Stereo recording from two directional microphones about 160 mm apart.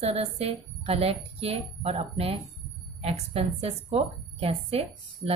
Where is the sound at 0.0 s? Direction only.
40° right (ahead or behind).